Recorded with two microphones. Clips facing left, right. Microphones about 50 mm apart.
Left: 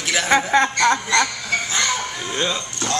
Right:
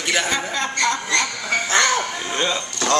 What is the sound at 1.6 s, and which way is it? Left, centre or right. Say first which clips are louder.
Music: right 8 dB; right.